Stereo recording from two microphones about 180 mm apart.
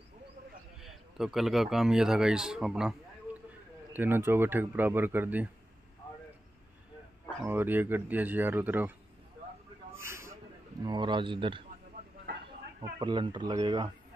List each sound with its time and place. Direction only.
0.7 s speech: centre (ahead or behind)
7.4 s speech: 10° right (ahead or behind)
9.9 s a sound: 15° right (ahead or behind)
10.8 s speech: 25° right (ahead or behind)
12.8 s speech: 25° right (ahead or behind)